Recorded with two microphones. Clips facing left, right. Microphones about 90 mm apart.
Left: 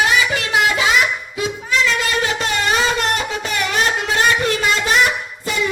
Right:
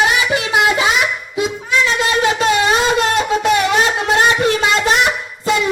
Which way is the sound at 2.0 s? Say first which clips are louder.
Right 5 dB; 25° right (ahead or behind).